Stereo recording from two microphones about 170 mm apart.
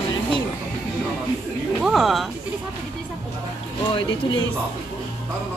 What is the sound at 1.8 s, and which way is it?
Speech, centre (ahead or behind).